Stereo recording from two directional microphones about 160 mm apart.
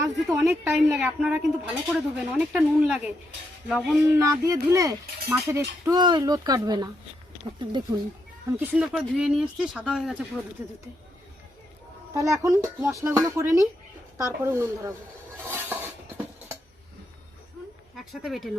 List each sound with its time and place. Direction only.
0.3 s speech: 15° right (ahead or behind); by 3.9 s 5° left (ahead or behind)
4.1 s a sound: 20° right (ahead or behind)
8.4 s speech: 15° right (ahead or behind)
10.6 s speech: 15° right (ahead or behind)
12.1 s a sound: 20° right (ahead or behind)
14.2 s speech: 15° right (ahead or behind)
15.4 s dishes: 10° right (ahead or behind)
17.9 s speech: centre (ahead or behind)